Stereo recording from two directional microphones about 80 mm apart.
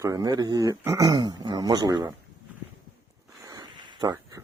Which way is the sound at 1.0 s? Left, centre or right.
Right.